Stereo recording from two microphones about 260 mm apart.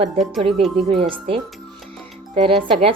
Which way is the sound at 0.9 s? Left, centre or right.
Centre.